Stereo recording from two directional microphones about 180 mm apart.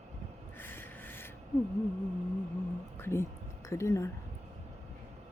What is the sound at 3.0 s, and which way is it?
Speech, 15° left (ahead or behind).